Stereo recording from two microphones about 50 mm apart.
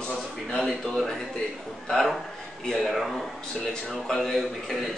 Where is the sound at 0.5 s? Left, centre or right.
Centre.